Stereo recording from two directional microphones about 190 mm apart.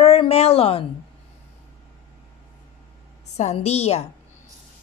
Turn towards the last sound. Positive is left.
turn(degrees=35)  # may be behind; listen again after turning